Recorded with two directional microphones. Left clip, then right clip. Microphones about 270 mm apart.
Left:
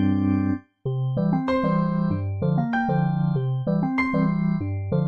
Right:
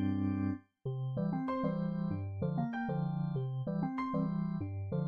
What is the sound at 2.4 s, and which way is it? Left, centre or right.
Music, centre.